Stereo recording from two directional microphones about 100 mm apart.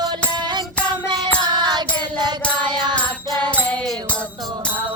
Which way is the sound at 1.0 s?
50° right (ahead or behind).